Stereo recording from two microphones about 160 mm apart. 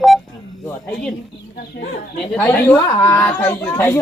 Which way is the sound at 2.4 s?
10° left (ahead or behind).